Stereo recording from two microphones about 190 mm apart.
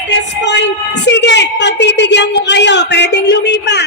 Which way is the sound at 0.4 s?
65° left (ahead or behind).